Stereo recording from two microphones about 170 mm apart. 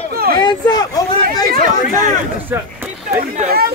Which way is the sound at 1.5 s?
50° right (ahead or behind).